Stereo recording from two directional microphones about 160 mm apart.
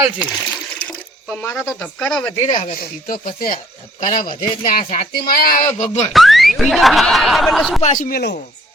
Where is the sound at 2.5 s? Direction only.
55° left (ahead or behind).